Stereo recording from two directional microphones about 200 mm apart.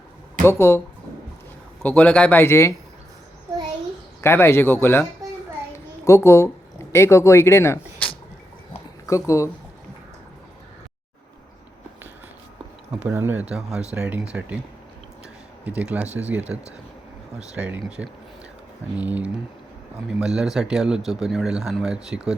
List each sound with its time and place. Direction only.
0.4 s speech: 10° left (ahead or behind)
1.8 s speech: 10° left (ahead or behind)
4.2 s speech: 10° left (ahead or behind)
5.7 s a sound: 15° left (ahead or behind)
6.9 s speech: 15° left (ahead or behind)
12.9 s speech: 10° right (ahead or behind)
15.6 s speech: 5° right (ahead or behind)